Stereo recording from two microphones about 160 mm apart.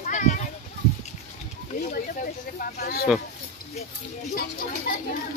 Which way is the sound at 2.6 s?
70° left (ahead or behind).